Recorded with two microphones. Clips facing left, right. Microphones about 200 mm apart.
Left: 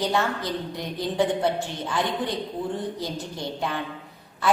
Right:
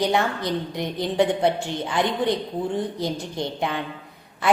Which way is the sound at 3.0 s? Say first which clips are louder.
Right 4 dB; 20° right (ahead or behind).